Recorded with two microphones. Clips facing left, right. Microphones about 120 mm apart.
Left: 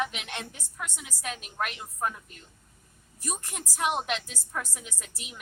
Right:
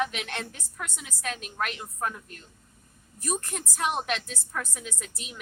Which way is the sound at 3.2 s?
15° left (ahead or behind).